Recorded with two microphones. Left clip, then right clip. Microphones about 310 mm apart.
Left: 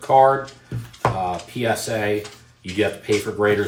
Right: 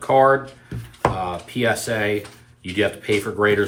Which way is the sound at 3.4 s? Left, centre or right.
Centre.